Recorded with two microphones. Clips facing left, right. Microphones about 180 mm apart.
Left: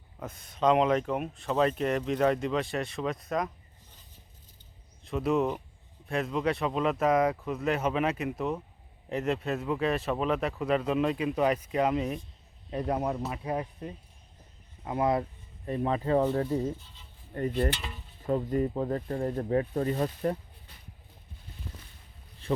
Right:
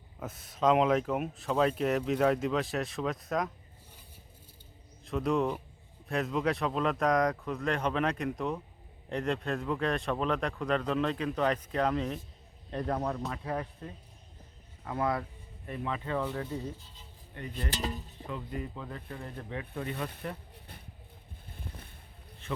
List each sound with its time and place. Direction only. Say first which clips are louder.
0.2 s speech: left 1 dB; 5° right (ahead or behind)
5.0 s speech: left 2 dB; centre (ahead or behind); by 15.3 s 20° left (ahead or behind)
15.6 s speech: left 7 dB; 35° left (ahead or behind)
17.3 s cutlery: left 11 dB; 45° left (ahead or behind)
17.7 s stir: left 1 dB; 40° right (ahead or behind)
18.3 s speech: left 11 dB; 45° left (ahead or behind)
21.4 s boat: even; 55° right (ahead or behind)
22.4 s speech: left 7 dB; 35° left (ahead or behind)